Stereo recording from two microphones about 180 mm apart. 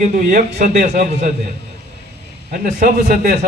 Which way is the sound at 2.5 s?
50° right (ahead or behind).